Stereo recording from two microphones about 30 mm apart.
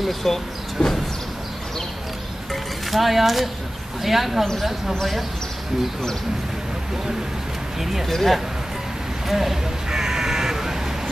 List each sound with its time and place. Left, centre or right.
0.2 s speech: centre
2.5 s music: centre
4.0 s speech: centre
7.8 s speech: centre
8.1 s speech: centre
9.3 s speech: centre
9.8 s crow: centre